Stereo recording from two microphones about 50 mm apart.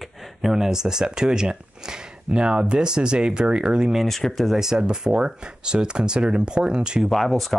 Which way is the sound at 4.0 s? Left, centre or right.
Centre.